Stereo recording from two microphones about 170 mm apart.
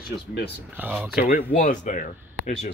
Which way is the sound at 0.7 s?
5° right (ahead or behind).